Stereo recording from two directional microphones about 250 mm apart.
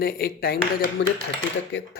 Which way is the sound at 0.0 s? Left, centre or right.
Left.